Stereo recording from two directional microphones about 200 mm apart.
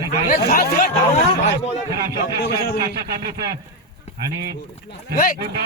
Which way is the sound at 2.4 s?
55° left (ahead or behind).